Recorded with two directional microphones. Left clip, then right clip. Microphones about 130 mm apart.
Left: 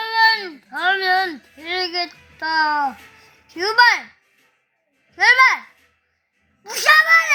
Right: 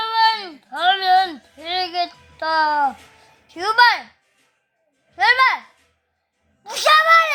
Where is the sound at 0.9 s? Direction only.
55° right (ahead or behind).